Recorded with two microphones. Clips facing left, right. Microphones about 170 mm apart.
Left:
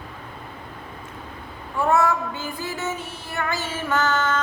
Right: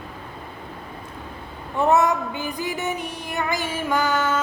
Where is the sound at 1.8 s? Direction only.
20° right (ahead or behind).